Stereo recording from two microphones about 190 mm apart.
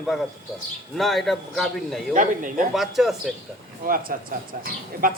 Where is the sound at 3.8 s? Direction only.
50° right (ahead or behind).